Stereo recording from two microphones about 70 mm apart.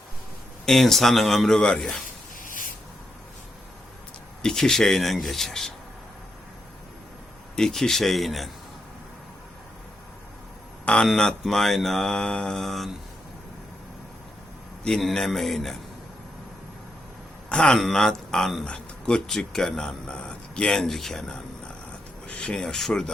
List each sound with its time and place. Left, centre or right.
0.6 s mantra: centre
4.4 s mantra: centre
7.5 s mantra: centre
10.8 s mantra: centre
14.8 s mantra: centre
17.5 s speech: centre